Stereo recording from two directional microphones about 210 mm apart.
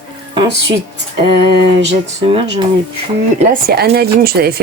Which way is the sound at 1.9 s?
25° right (ahead or behind).